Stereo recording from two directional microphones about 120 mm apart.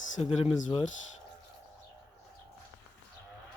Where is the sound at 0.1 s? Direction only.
70° left (ahead or behind).